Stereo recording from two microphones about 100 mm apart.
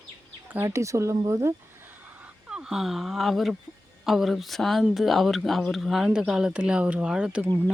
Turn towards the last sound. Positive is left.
turn(degrees=-10)  # may be behind; listen again after turning